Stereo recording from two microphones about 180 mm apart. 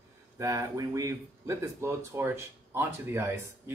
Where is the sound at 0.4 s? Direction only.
20° right (ahead or behind).